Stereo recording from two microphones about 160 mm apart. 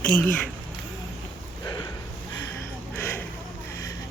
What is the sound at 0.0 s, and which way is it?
Speech, 10° left (ahead or behind).